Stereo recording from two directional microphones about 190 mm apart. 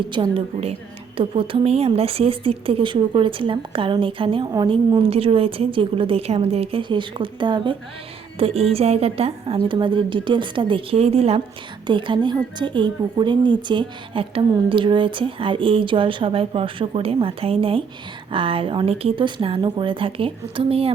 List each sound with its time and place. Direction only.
0.1 s a woman's voice: 25° right (ahead or behind)